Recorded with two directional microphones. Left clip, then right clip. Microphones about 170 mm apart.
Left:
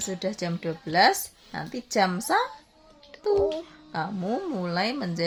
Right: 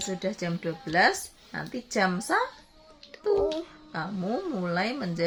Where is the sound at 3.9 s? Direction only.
35° left (ahead or behind).